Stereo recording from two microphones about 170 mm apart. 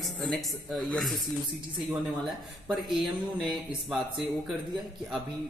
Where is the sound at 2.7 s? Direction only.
Centre (ahead or behind).